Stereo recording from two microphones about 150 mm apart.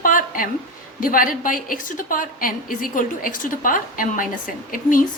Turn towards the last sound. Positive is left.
turn(degrees=65)  # may be behind; listen again after turning